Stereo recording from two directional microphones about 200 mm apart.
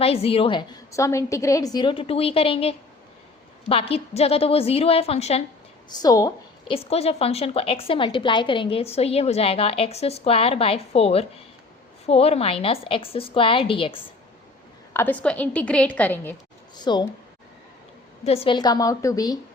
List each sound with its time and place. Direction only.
0.0 s a woman's voice: 30° left (ahead or behind)
5.9 s a woman's voice: 20° left (ahead or behind)
6.7 s a woman's voice: 30° left (ahead or behind)
14.9 s a woman's voice: 10° left (ahead or behind)
16.7 s speech: 20° left (ahead or behind)
18.3 s a woman's voice: 25° left (ahead or behind)